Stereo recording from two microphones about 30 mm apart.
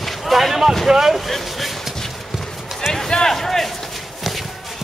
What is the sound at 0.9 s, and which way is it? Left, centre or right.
Speech, right.